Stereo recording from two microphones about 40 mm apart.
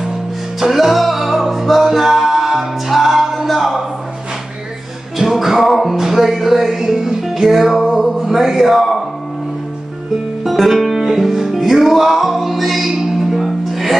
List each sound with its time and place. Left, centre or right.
0.6 s music: centre
5.1 s music: centre
10.4 s music: centre